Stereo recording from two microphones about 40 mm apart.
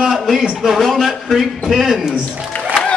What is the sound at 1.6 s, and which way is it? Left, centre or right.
Speech, centre.